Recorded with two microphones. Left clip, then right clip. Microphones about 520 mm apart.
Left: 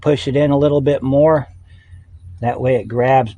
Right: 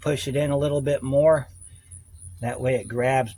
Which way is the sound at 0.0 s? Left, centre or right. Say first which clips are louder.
Left 10 dB; right.